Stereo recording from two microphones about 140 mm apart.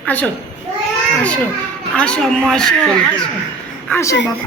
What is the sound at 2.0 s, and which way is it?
A woman's voice, 5° left (ahead or behind).